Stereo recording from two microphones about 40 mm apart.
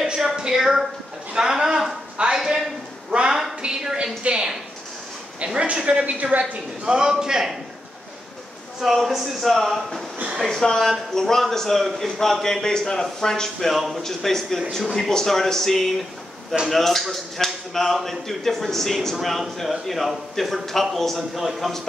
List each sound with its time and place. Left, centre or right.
0.4 s a woman's voice: centre
1.3 s a sound: centre
3.1 s a sound: right
5.4 s speech: right
6.0 s a woman's voice: right
6.5 s a man's voice: right
8.8 s a man's voice: centre
10.5 s a man's voice: centre
12.6 s a man's voice: centre